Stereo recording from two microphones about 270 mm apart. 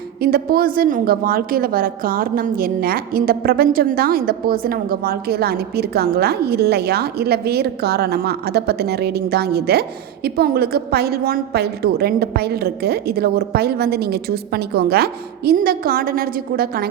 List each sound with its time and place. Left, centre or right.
0.2 s a woman's voice: right